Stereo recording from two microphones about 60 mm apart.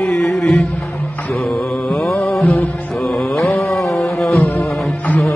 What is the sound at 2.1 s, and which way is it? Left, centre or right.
Music, centre.